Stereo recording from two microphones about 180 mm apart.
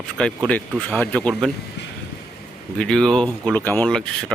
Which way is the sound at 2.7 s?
Centre (ahead or behind).